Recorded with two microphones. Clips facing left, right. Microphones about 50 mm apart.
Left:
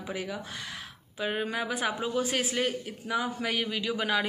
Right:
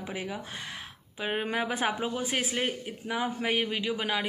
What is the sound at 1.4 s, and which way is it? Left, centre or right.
Speech, right.